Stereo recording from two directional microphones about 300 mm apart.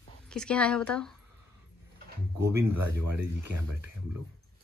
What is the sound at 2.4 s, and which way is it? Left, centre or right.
Speech, centre.